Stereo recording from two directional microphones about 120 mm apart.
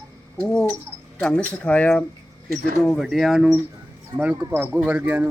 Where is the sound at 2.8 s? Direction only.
Centre (ahead or behind).